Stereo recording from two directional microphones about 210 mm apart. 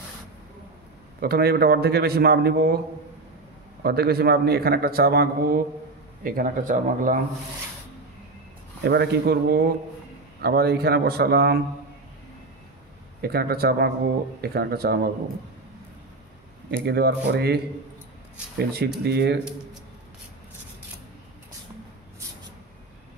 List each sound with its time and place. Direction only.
1.2 s a man's voice: 45° right (ahead or behind)
3.8 s a man's voice: 50° right (ahead or behind)
8.8 s a man's voice: 50° right (ahead or behind)
13.2 s a man's voice: 50° right (ahead or behind)
16.8 s a man's voice: 50° right (ahead or behind)
18.6 s a man's voice: 50° right (ahead or behind)